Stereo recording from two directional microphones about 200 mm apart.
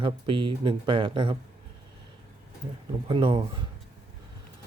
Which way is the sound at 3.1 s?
25° right (ahead or behind).